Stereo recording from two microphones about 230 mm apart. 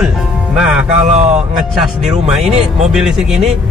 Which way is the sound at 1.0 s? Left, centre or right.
Right.